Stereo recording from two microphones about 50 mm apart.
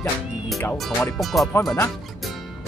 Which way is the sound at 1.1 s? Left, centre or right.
Centre.